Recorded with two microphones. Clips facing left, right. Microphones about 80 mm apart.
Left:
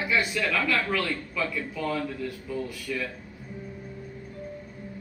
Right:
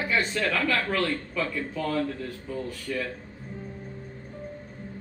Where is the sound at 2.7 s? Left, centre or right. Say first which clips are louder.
Right 1 dB; right.